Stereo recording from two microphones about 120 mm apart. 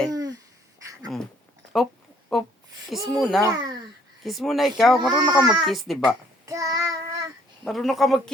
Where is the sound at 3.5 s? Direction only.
35° right (ahead or behind).